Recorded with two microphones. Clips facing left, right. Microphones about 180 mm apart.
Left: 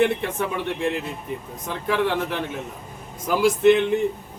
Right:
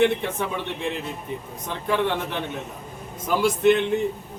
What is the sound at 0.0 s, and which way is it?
Speech, centre (ahead or behind).